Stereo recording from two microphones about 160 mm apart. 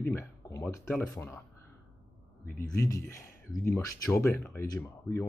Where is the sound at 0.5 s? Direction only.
15° left (ahead or behind).